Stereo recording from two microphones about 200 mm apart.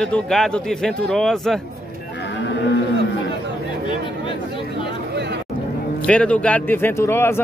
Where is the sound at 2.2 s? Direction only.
60° left (ahead or behind).